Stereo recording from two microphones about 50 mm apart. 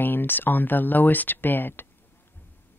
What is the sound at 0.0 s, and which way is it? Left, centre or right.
Speech, left.